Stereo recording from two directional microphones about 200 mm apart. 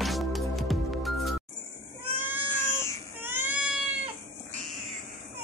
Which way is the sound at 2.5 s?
15° left (ahead or behind).